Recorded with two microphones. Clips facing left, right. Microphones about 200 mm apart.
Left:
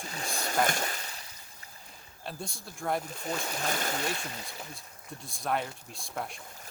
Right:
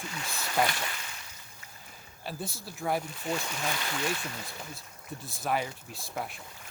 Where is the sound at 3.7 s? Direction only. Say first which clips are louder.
Left 2 dB; 40° left (ahead or behind).